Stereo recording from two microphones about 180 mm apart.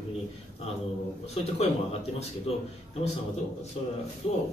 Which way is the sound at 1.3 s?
35° left (ahead or behind).